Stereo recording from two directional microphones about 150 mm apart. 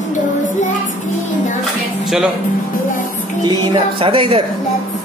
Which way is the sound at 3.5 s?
35° right (ahead or behind).